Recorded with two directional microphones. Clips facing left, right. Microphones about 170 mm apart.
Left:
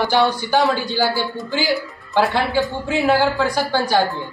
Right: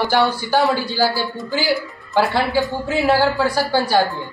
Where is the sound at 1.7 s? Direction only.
Centre (ahead or behind).